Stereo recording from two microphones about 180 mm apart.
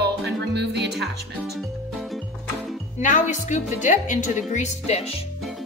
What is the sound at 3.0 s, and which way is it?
A woman's voice, 45° left (ahead or behind).